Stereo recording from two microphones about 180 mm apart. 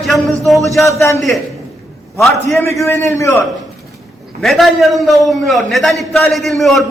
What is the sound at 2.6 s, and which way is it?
Speech, 15° left (ahead or behind).